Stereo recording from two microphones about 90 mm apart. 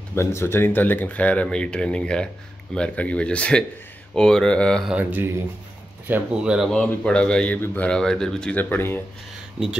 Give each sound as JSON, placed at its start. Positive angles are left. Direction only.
{"t": 0.1, "sound": "speech", "side_deg": 30}
{"t": 6.1, "sound": "speech", "side_deg": -20}
{"t": 6.4, "sound": "speech", "side_deg": -10}
{"t": 6.7, "sound": "speech", "side_deg": 10}
{"t": 8.5, "sound": "speech", "side_deg": 20}
{"t": 9.6, "sound": "speech", "side_deg": -15}